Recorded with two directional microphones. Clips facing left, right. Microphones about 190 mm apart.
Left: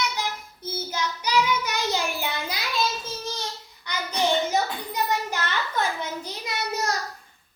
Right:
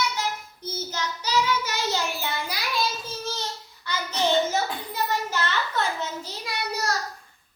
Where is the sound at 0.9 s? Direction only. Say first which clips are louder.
Left 2 dB; 15° left (ahead or behind).